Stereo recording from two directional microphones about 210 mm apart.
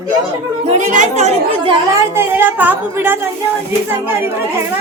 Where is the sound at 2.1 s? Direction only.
10° right (ahead or behind).